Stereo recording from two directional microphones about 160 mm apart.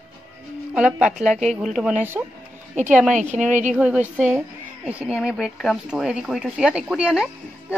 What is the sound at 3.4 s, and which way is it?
Speech, 50° right (ahead or behind).